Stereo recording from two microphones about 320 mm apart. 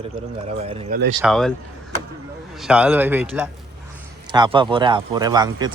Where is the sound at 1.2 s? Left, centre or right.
Centre.